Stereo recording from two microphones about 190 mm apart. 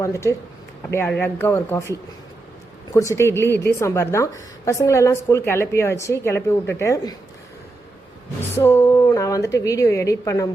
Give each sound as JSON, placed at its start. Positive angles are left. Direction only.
{"t": 0.0, "sound": "a woman's voice", "side_deg": 15}
{"t": 2.9, "sound": "a woman's voice", "side_deg": 15}
{"t": 8.5, "sound": "a woman's voice", "side_deg": 15}